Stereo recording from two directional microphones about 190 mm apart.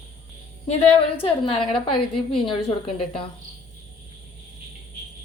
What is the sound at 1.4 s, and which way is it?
Speech, 25° left (ahead or behind).